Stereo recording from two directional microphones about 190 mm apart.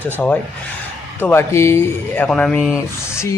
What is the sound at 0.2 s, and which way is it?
Speech, 10° left (ahead or behind).